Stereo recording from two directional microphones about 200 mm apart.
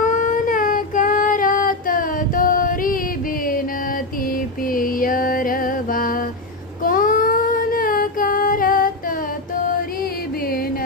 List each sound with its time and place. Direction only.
0.0 s child singing: 40° left (ahead or behind)
4.3 s mantra: 45° left (ahead or behind)
6.8 s child singing: 45° left (ahead or behind)